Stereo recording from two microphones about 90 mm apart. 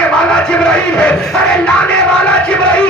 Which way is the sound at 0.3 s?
10° left (ahead or behind).